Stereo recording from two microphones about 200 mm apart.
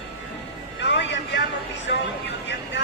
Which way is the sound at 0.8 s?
65° left (ahead or behind).